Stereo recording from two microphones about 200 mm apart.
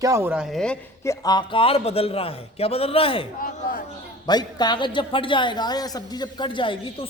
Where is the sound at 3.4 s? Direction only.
45° left (ahead or behind).